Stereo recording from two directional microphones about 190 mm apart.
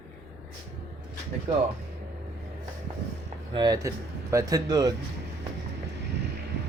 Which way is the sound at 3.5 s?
20° right (ahead or behind).